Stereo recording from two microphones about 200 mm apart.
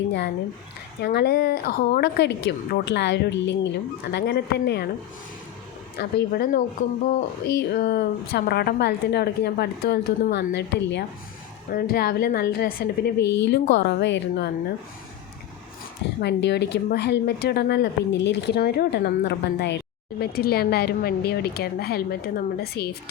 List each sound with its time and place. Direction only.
1.0 s a woman's voice: 50° left (ahead or behind)
6.0 s a woman's voice: 55° left (ahead or behind)
6.8 s speech: 40° left (ahead or behind)
7.4 s a woman's voice: 50° left (ahead or behind)
16.2 s a woman's voice: 60° left (ahead or behind)